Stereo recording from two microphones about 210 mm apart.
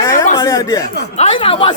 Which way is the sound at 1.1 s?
30° left (ahead or behind).